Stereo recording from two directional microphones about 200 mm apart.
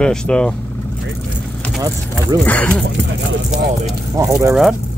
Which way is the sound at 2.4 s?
10° left (ahead or behind).